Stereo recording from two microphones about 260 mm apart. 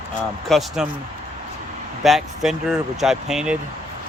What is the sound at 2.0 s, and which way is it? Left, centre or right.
Speech, centre.